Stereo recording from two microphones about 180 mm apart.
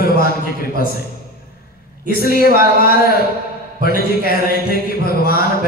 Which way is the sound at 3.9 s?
55° left (ahead or behind).